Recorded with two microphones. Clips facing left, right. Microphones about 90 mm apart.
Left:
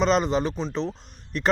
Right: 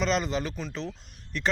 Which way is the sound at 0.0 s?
35° left (ahead or behind).